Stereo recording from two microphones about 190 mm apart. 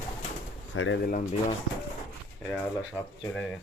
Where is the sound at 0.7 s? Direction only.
80° left.